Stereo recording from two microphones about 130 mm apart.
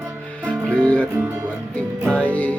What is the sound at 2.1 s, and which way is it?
Music, 10° left (ahead or behind).